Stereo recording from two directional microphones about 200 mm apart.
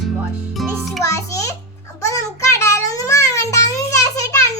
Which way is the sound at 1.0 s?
15° left (ahead or behind).